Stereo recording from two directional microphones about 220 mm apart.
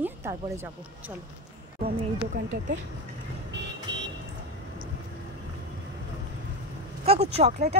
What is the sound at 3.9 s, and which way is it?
Vehicle, 55° right (ahead or behind).